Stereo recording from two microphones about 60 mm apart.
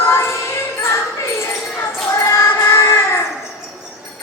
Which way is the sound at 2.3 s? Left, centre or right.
Left.